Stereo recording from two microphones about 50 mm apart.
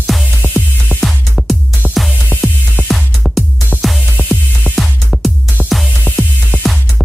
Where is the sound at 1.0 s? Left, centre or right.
Centre.